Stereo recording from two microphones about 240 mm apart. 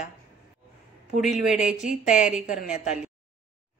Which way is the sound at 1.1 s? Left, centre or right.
Centre.